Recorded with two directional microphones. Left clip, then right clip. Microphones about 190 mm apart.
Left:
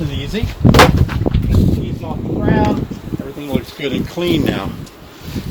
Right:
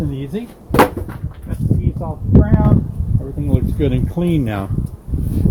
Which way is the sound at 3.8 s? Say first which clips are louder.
Left 1 dB; 35° right (ahead or behind).